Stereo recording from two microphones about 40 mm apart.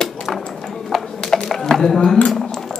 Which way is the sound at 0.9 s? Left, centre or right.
Centre.